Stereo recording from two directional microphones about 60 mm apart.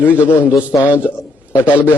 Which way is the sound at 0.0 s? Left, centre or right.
Left.